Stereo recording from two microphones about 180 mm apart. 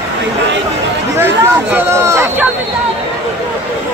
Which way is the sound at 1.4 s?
10° right (ahead or behind).